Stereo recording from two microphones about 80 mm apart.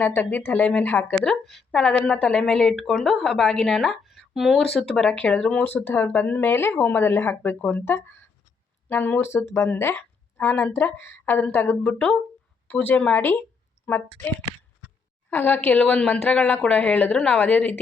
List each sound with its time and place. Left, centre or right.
0.0 s speech: left
1.5 s a woman's voice: centre
4.8 s a woman's voice: centre
5.6 s speech: left
7.6 s a woman's voice: centre
7.9 s speech: left
11.8 s a woman's voice: centre